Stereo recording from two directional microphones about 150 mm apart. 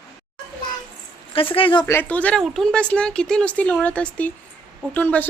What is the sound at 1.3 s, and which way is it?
Speech, 35° left (ahead or behind).